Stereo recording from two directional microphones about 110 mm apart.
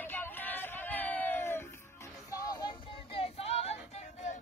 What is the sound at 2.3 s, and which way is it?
Child singing, 40° left (ahead or behind).